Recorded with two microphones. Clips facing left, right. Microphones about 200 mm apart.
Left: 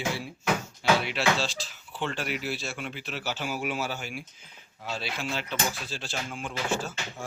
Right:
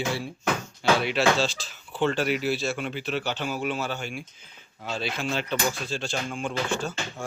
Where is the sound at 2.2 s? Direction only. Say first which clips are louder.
Right 7 dB; centre (ahead or behind).